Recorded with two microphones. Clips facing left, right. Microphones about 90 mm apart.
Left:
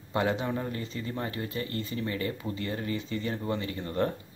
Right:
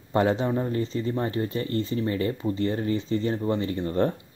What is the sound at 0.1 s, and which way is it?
Speech, 35° right (ahead or behind).